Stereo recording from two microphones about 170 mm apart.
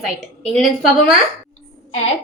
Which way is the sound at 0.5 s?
Centre (ahead or behind).